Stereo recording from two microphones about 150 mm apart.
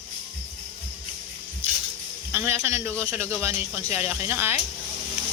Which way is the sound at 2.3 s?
15° right (ahead or behind).